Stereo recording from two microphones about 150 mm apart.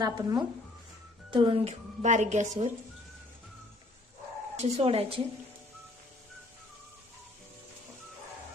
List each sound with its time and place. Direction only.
0.0 s speech: 25° right (ahead or behind)
1.6 s a woman's voice: 50° right (ahead or behind)
4.5 s speech: 45° right (ahead or behind)